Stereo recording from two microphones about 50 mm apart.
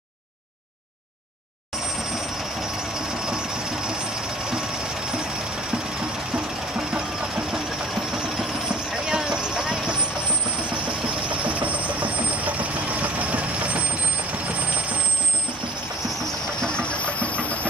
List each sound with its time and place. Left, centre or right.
3.3 s vehicle: centre
6.3 s vehicle: centre
8.9 s vehicle: centre
10.9 s vehicle: right
16.6 s engine: left